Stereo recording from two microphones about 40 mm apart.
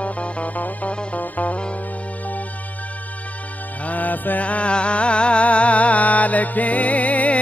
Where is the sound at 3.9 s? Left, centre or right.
Left.